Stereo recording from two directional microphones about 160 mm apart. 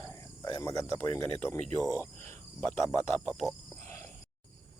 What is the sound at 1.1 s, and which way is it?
Speech, 15° left (ahead or behind).